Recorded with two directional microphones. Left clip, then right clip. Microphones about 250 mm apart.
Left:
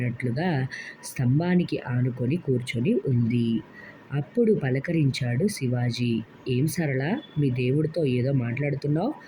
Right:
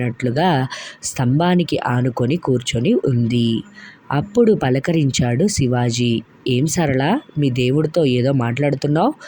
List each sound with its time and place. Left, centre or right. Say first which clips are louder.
0.3 s speech: right 13 dB; right